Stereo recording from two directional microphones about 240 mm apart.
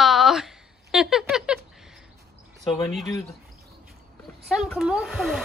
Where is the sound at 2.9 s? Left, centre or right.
Centre.